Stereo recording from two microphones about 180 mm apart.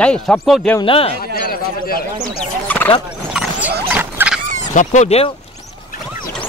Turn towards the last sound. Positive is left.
turn(degrees=35)  # may be behind; listen again after turning